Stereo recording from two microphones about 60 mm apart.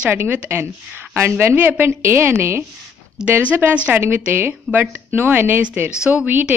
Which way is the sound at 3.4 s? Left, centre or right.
Right.